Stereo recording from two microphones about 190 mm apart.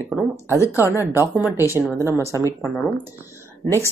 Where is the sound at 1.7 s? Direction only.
15° right (ahead or behind).